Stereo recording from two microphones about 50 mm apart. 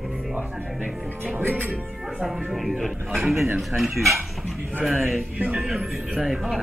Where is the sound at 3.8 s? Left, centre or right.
Centre.